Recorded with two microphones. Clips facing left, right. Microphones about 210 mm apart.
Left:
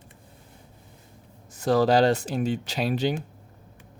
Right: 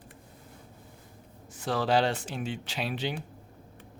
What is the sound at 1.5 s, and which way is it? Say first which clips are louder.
Speech: left 7 dB; 40° left (ahead or behind).